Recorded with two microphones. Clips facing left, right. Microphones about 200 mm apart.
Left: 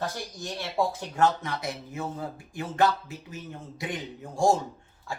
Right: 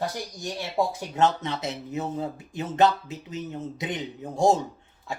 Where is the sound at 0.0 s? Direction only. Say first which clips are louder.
Right 3 dB; 15° right (ahead or behind).